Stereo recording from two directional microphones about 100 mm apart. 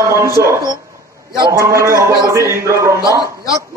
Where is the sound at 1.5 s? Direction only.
30° right (ahead or behind).